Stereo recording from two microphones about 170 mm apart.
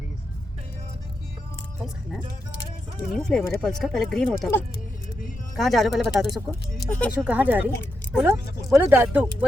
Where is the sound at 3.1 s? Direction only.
5° left (ahead or behind).